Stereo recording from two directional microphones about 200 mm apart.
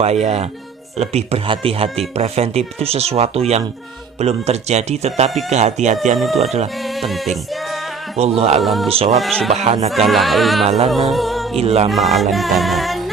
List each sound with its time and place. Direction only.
0.0 s speech: 35° right (ahead or behind)
6.1 s music: centre (ahead or behind)
8.2 s speech: 30° right (ahead or behind)
8.6 s music: centre (ahead or behind)
8.9 s speech: 30° right (ahead or behind)
9.2 s music: centre (ahead or behind)
9.5 s speech: 30° right (ahead or behind)
10.1 s music: centre (ahead or behind)
11.5 s speech: 30° right (ahead or behind)
11.9 s music: centre (ahead or behind)